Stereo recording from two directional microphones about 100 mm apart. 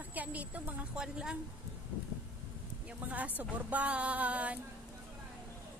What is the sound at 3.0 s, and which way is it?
Speech, 15° right (ahead or behind).